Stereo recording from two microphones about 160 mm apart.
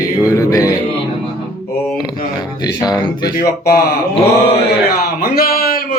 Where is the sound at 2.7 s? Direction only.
25° left (ahead or behind).